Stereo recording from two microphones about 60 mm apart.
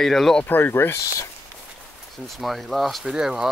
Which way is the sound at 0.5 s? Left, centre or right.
Left.